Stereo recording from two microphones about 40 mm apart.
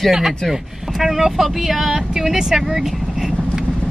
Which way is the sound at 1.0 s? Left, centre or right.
Centre.